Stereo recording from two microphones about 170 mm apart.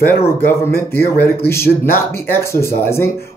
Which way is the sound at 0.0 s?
15° left (ahead or behind).